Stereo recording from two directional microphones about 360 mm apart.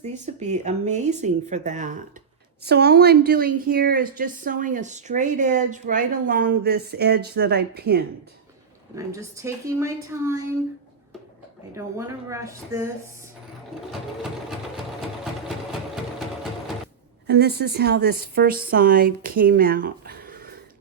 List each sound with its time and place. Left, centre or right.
0.0 s a woman's voice: centre
9.0 s a woman's voice: centre
11.7 s a woman's voice: centre
17.2 s a woman's voice: right